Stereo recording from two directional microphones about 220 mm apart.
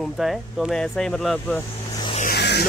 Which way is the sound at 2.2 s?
50° left (ahead or behind).